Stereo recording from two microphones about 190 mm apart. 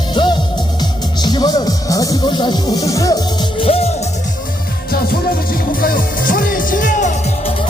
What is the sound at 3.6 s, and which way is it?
Music, 30° left (ahead or behind).